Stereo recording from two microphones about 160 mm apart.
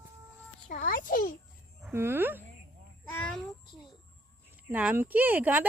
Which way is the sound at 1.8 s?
15° right (ahead or behind).